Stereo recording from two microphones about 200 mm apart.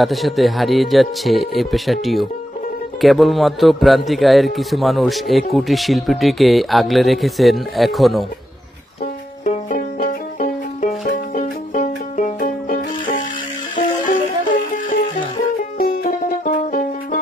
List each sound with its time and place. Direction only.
0.0 s speech: centre (ahead or behind)
9.0 s music: 40° left (ahead or behind)
14.9 s music: 45° left (ahead or behind)